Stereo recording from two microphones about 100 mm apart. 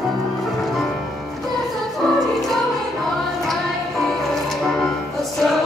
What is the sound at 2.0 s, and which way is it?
Music, centre (ahead or behind).